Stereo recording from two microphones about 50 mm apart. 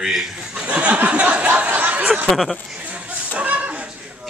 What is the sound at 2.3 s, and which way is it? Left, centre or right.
Speech, centre.